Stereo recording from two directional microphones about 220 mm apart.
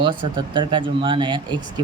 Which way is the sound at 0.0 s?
20° right (ahead or behind).